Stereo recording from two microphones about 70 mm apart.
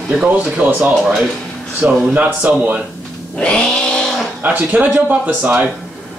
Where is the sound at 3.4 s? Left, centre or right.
Centre.